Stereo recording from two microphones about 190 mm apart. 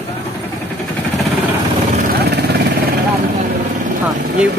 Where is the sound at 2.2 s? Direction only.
60° right (ahead or behind).